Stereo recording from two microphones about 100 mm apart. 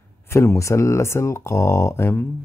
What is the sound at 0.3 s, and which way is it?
Speech, 25° left (ahead or behind).